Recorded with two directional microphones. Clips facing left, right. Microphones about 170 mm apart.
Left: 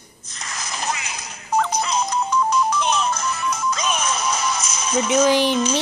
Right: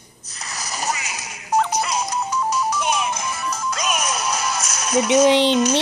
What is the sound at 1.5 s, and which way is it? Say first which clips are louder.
Music: right 1 dB; 80° right.